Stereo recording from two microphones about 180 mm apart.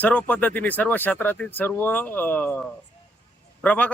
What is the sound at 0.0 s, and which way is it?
Speech, 10° left (ahead or behind).